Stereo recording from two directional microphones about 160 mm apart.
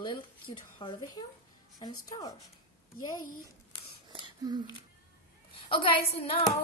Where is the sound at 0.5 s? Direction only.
35° left (ahead or behind).